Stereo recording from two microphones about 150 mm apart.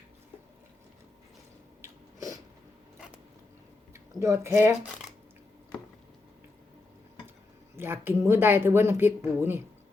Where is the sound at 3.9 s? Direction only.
20° right (ahead or behind).